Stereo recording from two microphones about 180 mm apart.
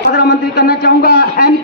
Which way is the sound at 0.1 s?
60° left (ahead or behind).